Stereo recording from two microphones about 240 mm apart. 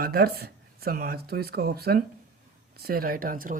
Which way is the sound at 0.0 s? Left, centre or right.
Right.